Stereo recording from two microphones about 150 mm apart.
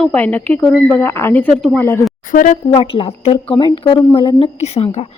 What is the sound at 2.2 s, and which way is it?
Speech, 60° left (ahead or behind).